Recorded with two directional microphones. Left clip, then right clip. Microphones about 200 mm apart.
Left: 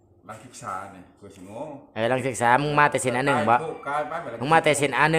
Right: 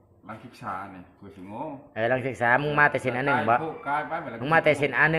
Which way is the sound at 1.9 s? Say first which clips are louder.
Left 1 dB; 30° left (ahead or behind).